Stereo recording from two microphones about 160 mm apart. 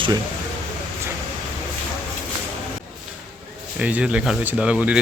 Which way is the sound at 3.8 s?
10° right (ahead or behind).